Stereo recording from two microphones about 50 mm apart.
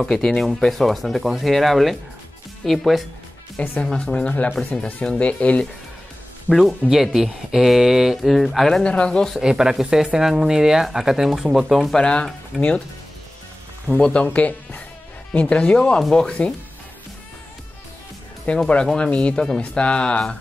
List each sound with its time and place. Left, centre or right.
0.0 s speech: centre
3.8 s speech: centre
6.9 s speech: centre
8.8 s speech: left
9.4 s speech: centre
11.9 s speech: centre
14.0 s speech: left
18.5 s speech: left